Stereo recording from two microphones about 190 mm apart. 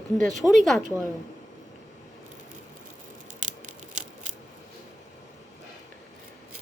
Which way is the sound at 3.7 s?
40° right (ahead or behind).